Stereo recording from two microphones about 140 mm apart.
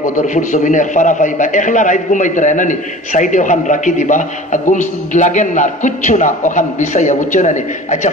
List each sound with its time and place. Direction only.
0.0 s a man's voice: 65° left (ahead or behind)